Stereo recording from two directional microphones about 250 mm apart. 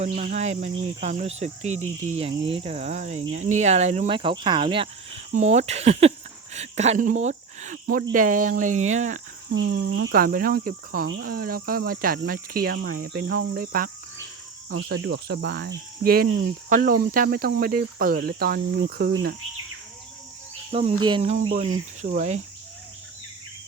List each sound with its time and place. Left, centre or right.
0.0 s speech: right
9.6 s speech: right
21.0 s speech: right